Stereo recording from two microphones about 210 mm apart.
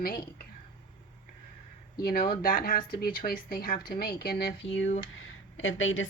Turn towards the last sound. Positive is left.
turn(degrees=65)  # may be behind; listen again after turning